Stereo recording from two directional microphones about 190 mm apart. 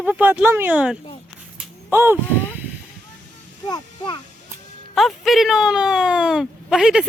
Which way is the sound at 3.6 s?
20° left (ahead or behind).